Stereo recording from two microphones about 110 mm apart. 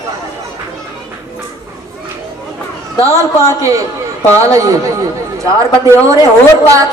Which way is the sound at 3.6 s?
30° right (ahead or behind).